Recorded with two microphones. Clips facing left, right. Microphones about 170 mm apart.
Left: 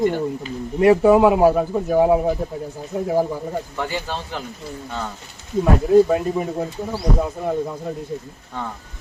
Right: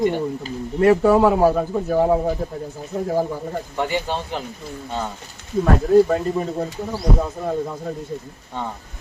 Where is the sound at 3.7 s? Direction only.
20° right (ahead or behind).